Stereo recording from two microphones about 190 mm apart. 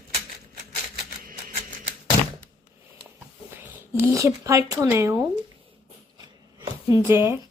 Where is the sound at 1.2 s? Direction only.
45° right (ahead or behind).